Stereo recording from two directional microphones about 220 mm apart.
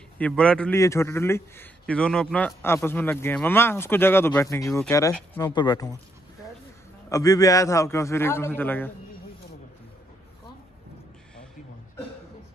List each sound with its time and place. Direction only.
0.2 s a man's voice: 5° left (ahead or behind)
7.1 s a man's voice: 15° left (ahead or behind)